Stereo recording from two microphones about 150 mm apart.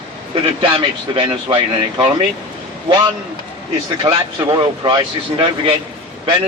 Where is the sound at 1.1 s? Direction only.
30° right (ahead or behind).